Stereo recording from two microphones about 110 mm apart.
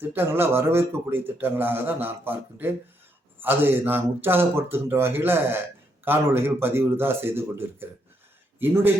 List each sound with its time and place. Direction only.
0.0 s a man's voice: 20° right (ahead or behind)